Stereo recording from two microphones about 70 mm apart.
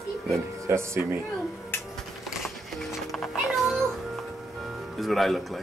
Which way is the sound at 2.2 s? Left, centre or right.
Centre.